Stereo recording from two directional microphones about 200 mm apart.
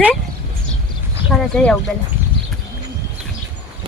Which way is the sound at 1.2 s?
Centre (ahead or behind).